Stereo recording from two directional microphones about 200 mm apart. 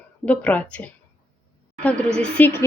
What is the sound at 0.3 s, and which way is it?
Speech, 5° left (ahead or behind).